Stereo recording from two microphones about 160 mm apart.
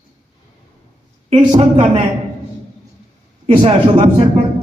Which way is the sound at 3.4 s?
30° right (ahead or behind).